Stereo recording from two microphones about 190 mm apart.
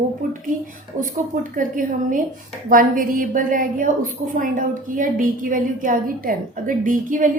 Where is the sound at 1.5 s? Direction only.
45° right (ahead or behind).